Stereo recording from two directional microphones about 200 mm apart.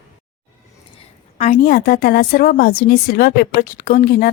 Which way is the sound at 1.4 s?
40° left (ahead or behind).